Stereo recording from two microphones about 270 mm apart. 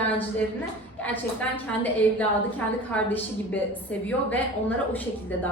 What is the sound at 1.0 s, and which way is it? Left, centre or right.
A woman's voice, centre.